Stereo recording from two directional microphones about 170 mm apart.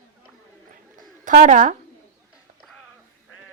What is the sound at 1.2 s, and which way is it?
Speech, 50° right (ahead or behind).